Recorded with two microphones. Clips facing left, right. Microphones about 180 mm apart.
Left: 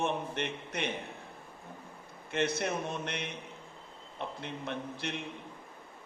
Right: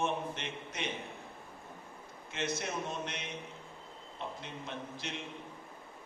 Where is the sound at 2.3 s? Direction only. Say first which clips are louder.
Left 6 dB; 60° left (ahead or behind).